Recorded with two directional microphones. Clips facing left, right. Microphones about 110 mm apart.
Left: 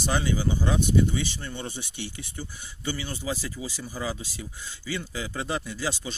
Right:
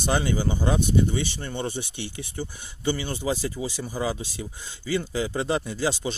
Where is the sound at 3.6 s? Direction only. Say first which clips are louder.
Right 5 dB; 90° right.